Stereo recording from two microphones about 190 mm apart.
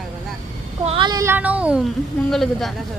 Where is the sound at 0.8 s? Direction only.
25° right (ahead or behind); by 2.7 s centre (ahead or behind).